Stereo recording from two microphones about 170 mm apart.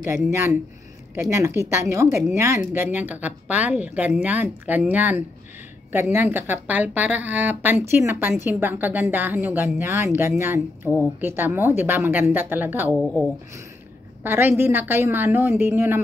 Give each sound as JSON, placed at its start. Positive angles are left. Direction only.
{"t": 0.3, "sound": "speech", "side_deg": -15}
{"t": 14.2, "sound": "speech", "side_deg": -10}